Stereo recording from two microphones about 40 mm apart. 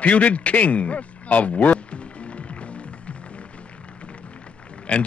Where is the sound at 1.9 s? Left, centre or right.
Left.